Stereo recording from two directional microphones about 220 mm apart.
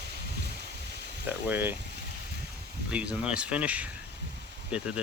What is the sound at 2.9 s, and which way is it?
Speech, 5° right (ahead or behind).